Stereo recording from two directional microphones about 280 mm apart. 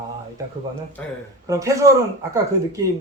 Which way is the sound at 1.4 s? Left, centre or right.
Centre.